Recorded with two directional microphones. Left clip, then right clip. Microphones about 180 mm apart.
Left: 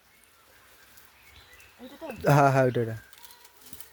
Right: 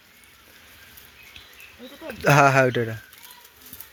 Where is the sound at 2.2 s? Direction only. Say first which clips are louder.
Right 5 dB; 10° left (ahead or behind).